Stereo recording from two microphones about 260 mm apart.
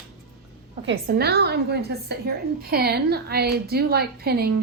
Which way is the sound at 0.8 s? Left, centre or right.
Right.